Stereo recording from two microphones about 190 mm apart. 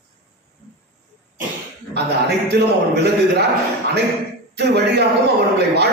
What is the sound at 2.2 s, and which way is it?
Speech, 60° right (ahead or behind).